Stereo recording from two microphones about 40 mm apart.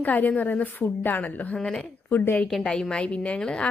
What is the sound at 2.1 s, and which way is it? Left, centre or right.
Speech, left.